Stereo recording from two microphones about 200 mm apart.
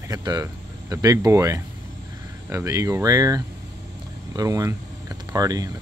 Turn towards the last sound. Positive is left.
turn(degrees=-20)  # may be behind; listen again after turning